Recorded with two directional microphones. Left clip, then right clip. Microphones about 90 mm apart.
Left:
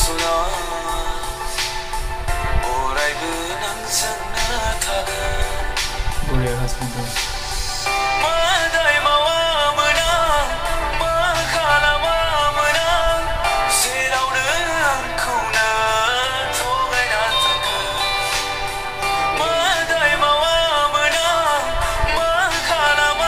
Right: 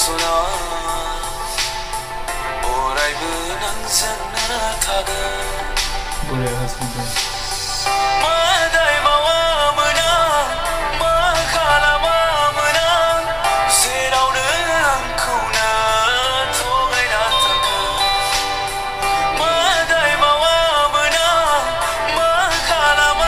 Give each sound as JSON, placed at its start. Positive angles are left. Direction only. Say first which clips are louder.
{"t": 0.0, "sound": "music", "louder": "right 2 dB", "side_deg": -35}
{"t": 7.8, "sound": "music", "louder": "right 2 dB", "side_deg": -35}